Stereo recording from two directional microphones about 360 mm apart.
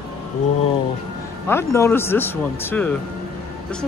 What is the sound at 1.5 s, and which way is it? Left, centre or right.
Speech, centre.